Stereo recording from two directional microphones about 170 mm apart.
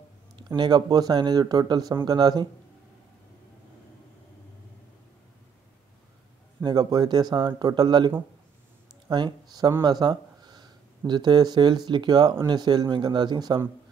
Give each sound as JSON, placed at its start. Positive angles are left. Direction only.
{"t": 0.4, "sound": "speech", "side_deg": -25}
{"t": 6.6, "sound": "speech", "side_deg": -25}
{"t": 9.1, "sound": "speech", "side_deg": -25}